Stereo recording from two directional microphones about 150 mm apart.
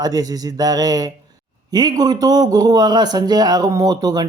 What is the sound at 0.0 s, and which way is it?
A man's voice, 25° right (ahead or behind).